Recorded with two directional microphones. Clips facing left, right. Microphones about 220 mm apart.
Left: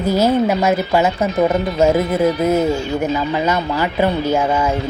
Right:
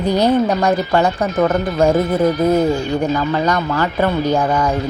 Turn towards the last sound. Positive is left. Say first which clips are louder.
# right 1 dB
turn(degrees=10)  # may be behind; listen again after turning